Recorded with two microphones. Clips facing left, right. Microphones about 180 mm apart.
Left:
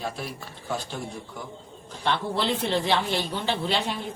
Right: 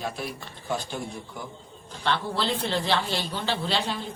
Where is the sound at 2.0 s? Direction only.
20° left (ahead or behind).